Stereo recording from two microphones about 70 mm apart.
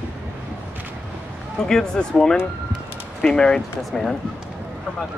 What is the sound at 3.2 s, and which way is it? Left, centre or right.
Speech, centre.